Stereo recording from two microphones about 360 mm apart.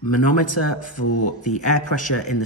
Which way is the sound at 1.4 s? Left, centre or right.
Centre.